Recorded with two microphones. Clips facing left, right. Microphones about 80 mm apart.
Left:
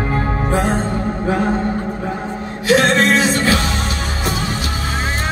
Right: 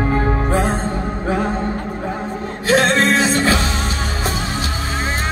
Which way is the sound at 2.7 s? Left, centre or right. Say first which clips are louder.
Left 1 dB; right.